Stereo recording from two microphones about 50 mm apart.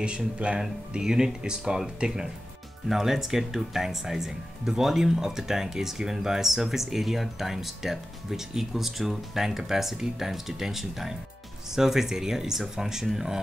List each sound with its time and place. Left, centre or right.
0.0 s speech: right; by 13.4 s centre